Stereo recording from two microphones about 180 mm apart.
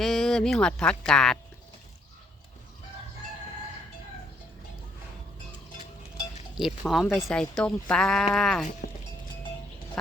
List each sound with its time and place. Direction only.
0.0 s speech: centre (ahead or behind)
6.6 s speech: centre (ahead or behind)
8.8 s music: 55° left (ahead or behind)